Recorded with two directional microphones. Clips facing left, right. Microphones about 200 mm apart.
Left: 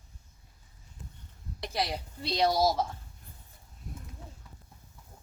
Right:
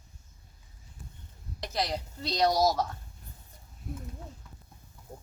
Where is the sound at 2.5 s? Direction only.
25° left (ahead or behind).